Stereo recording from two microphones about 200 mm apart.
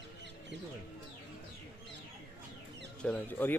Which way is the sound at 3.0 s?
5° left (ahead or behind).